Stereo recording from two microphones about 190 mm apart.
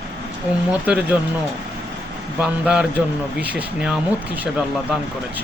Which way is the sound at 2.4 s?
5° right (ahead or behind).